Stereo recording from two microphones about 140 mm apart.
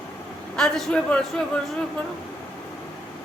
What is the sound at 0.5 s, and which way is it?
Speech, 5° left (ahead or behind).